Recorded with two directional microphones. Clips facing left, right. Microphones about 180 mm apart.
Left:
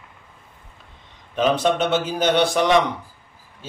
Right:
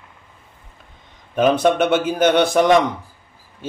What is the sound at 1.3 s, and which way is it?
A man's voice, 55° right (ahead or behind).